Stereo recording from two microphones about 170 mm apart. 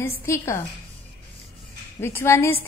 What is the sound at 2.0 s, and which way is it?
Speech, 15° left (ahead or behind).